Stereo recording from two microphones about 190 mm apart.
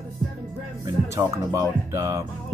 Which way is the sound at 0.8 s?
15° right (ahead or behind).